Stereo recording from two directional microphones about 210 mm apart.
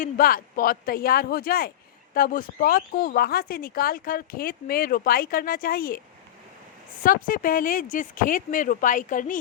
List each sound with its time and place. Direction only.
0.0 s speech: 40° left (ahead or behind)
7.0 s speech: 40° left (ahead or behind)